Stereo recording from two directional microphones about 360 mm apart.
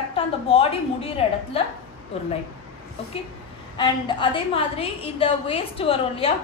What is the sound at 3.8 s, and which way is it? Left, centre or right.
A woman's voice, centre.